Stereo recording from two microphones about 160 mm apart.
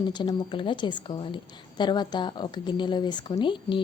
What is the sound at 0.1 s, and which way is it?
Speech, 30° left (ahead or behind).